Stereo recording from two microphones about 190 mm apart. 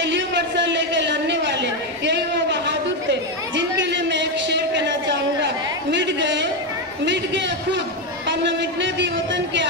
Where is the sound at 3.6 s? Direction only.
70° right (ahead or behind).